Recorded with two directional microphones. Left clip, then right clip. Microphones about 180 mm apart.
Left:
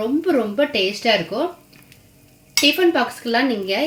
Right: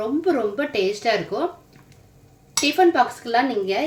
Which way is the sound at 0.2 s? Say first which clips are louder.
Left 3 dB; 40° left (ahead or behind).